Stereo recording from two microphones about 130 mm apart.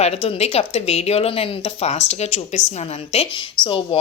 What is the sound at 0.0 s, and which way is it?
Speech, 50° left (ahead or behind).